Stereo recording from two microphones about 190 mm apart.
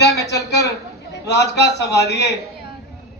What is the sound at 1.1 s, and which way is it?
A man's voice, 60° left (ahead or behind).